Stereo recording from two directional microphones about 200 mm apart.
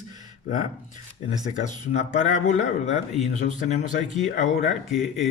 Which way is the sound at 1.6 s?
35° left (ahead or behind).